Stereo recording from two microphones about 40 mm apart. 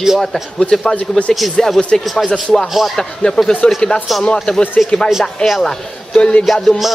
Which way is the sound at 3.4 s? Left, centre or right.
Left.